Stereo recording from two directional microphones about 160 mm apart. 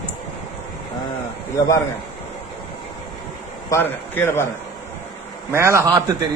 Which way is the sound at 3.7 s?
15° left (ahead or behind).